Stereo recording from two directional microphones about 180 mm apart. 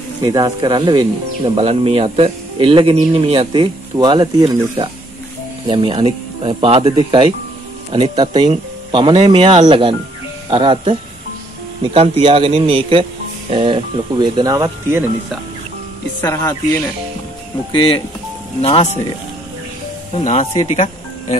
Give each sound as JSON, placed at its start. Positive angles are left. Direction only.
{"t": 0.2, "sound": "speech", "side_deg": -20}
{"t": 5.7, "sound": "a man's voice", "side_deg": -30}
{"t": 16.2, "sound": "speech", "side_deg": 10}
{"t": 17.7, "sound": "speech", "side_deg": 30}
{"t": 20.2, "sound": "speech", "side_deg": 40}